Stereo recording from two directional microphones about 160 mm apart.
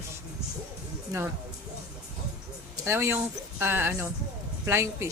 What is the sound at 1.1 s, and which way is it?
Speech, 20° right (ahead or behind).